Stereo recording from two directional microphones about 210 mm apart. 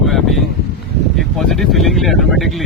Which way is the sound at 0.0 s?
Centre (ahead or behind).